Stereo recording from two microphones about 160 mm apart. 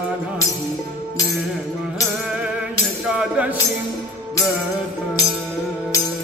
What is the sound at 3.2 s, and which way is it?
Music, 10° right (ahead or behind).